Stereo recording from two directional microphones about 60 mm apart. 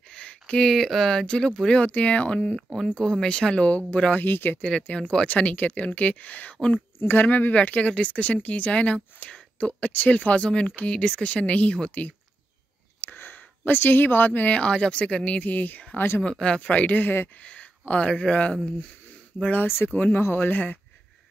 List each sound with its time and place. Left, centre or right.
0.1 s speech: centre
2.5 s speech: centre; by 4.2 s left
4.2 s speech: left
4.6 s speech: centre
13.0 s speech: left
16.2 s speech: centre; by 17.3 s left
17.4 s speech: left
19.6 s speech: left
20.3 s speech: left